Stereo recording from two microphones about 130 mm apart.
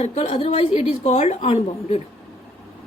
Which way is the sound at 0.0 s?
55° left (ahead or behind).